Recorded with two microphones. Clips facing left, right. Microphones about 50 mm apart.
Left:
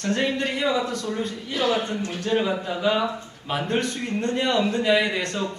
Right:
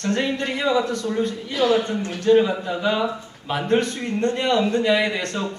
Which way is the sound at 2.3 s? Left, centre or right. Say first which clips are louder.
Right 4 dB; centre.